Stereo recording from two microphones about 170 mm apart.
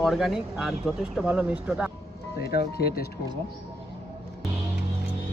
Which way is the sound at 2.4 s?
70° left (ahead or behind).